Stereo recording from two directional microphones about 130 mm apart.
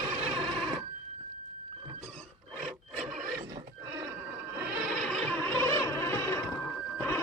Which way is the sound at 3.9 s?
15° right (ahead or behind).